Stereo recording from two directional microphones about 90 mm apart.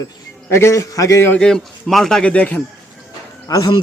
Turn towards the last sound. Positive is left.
turn(degrees=45)  # may be behind; listen again after turning